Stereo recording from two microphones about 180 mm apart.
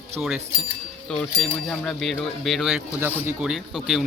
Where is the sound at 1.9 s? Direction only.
5° left (ahead or behind).